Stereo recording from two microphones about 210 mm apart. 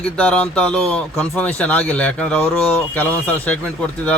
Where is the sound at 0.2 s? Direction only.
5° left (ahead or behind).